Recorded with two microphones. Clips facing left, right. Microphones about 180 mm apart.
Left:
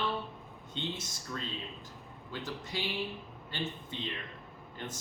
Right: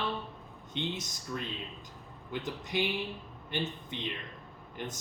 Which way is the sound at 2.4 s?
20° right (ahead or behind).